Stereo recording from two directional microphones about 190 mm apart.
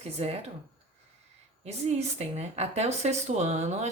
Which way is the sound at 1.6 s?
35° right (ahead or behind).